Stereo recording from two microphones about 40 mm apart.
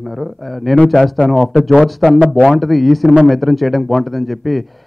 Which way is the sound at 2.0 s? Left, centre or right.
Left.